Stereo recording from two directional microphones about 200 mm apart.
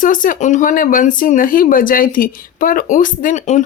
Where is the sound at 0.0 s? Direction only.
40° left (ahead or behind).